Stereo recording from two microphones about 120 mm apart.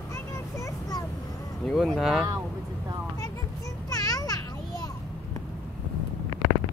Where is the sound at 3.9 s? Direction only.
30° left (ahead or behind).